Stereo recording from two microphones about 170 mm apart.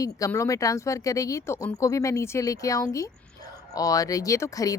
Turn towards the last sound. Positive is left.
turn(degrees=20)  # may be behind; listen again after turning